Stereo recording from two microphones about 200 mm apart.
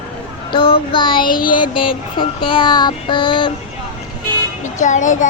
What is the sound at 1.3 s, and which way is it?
Child singing, 45° left (ahead or behind).